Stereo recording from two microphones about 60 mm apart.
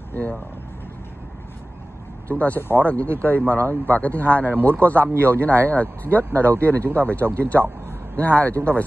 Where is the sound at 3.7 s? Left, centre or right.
Left.